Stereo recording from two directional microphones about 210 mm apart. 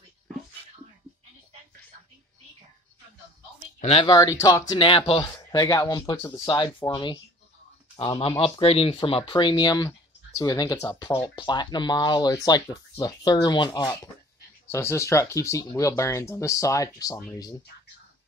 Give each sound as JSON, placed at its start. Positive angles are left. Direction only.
{"t": 3.8, "sound": "speech", "side_deg": 25}